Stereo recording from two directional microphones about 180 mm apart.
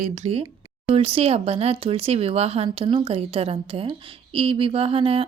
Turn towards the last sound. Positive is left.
turn(degrees=-30)  # may be behind; listen again after turning